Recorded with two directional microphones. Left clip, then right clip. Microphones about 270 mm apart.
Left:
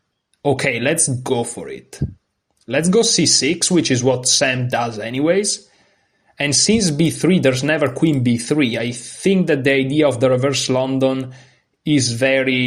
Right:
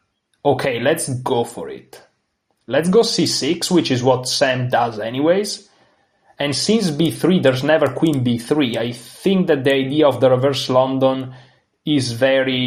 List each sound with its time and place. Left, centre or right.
0.4 s speech: left